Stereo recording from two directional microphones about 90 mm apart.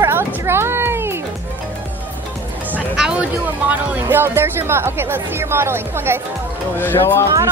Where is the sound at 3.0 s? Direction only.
15° right (ahead or behind).